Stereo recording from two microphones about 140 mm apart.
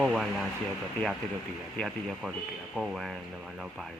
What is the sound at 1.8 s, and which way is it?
Speech, centre (ahead or behind).